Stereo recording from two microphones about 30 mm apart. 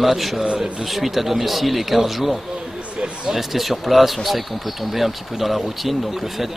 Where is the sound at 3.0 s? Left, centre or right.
Right.